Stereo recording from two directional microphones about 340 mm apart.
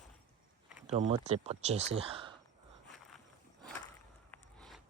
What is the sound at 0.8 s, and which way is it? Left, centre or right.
Speech, centre.